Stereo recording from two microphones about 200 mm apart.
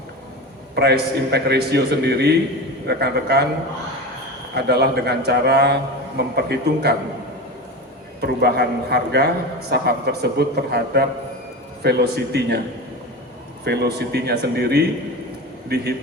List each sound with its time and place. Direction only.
0.8 s a man's voice: 55° right (ahead or behind)
4.5 s a man's voice: 55° right (ahead or behind)
8.2 s a man's voice: 55° right (ahead or behind)
13.7 s a man's voice: 55° right (ahead or behind)